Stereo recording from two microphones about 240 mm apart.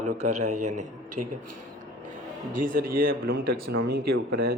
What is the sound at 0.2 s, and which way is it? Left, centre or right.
A man's voice, right.